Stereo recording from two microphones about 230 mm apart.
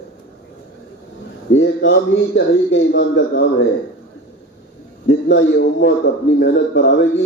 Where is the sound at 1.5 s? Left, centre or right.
Left.